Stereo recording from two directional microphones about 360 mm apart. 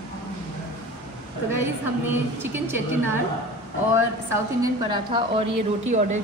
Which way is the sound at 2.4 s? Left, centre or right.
Centre.